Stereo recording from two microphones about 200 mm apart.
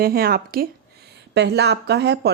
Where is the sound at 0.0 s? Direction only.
50° right (ahead or behind).